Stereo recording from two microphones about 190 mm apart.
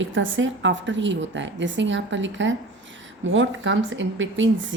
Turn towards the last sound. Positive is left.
turn(degrees=-80)